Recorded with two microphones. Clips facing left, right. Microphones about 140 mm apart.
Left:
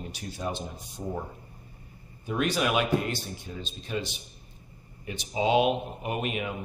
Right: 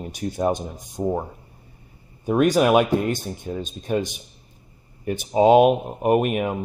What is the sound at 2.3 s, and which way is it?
Speech, 45° right (ahead or behind).